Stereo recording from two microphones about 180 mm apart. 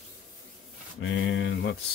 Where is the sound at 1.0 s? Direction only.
90° left.